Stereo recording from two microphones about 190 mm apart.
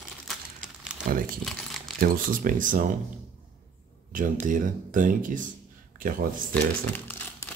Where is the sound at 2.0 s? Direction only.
50° right (ahead or behind).